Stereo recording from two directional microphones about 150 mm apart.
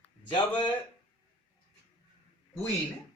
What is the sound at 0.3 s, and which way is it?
Speech, 30° left (ahead or behind).